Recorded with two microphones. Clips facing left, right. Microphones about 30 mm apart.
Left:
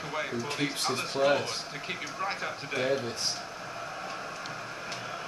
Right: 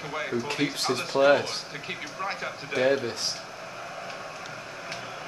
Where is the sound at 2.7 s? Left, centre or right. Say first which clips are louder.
Right 6 dB; right.